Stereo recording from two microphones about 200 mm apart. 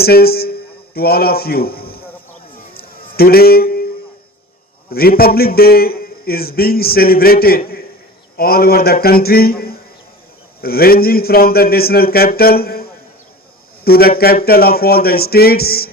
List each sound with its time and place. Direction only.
0.0 s a man's voice: 50° left (ahead or behind)
2.7 s a sound: 50° left (ahead or behind)
4.9 s a man's voice: 50° left (ahead or behind)